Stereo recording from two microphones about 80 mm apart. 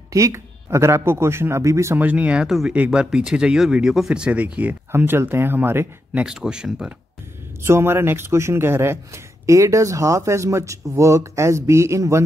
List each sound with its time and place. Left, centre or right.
0.1 s a man's voice: right
2.0 s speech: centre
2.4 s speech: centre
2.7 s speech: centre
6.2 s speech: centre
7.6 s a man's voice: right